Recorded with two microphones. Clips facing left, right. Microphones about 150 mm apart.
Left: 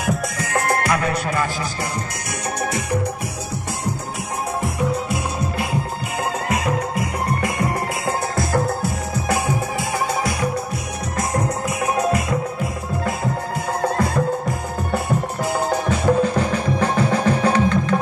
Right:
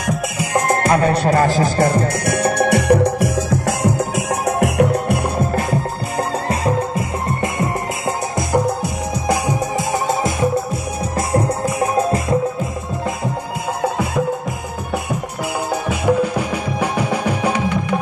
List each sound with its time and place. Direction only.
0.4 s music: 15° right (ahead or behind); by 3.9 s 90° right
4.5 s music: 70° right (ahead or behind)
6.5 s music: 30° right (ahead or behind)
11.1 s music: 30° right (ahead or behind)
15.7 s music: 10° right (ahead or behind)